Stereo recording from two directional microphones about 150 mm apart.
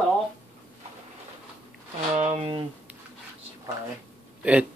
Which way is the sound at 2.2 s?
50° right (ahead or behind).